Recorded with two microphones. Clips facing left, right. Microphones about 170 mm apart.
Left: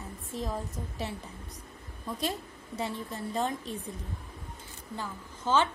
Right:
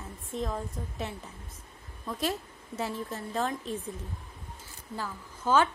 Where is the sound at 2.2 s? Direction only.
Centre (ahead or behind).